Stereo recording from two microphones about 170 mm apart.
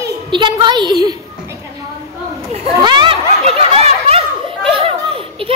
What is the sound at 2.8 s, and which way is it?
Snicker, 30° right (ahead or behind).